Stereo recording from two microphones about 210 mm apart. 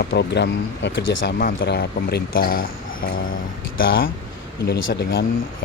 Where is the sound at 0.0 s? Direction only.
50° left (ahead or behind).